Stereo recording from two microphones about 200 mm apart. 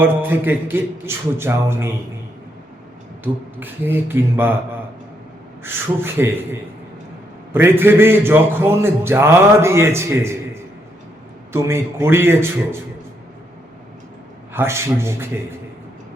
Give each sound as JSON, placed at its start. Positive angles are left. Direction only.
{"t": 0.0, "sound": "a man's voice", "side_deg": -10}
{"t": 3.6, "sound": "a man's voice", "side_deg": -10}
{"t": 5.6, "sound": "a man's voice", "side_deg": -10}
{"t": 14.5, "sound": "a man's voice", "side_deg": -10}